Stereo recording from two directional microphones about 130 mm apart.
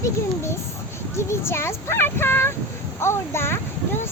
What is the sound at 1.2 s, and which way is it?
A child's voice, 20° left (ahead or behind).